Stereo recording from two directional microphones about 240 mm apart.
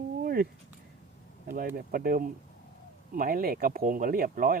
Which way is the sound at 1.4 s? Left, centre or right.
Right.